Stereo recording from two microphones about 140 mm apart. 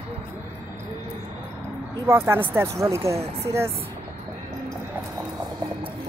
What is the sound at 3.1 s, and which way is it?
Speech, 45° right (ahead or behind).